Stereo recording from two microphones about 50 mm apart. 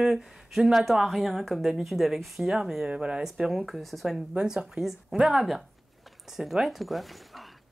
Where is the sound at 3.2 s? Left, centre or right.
Centre.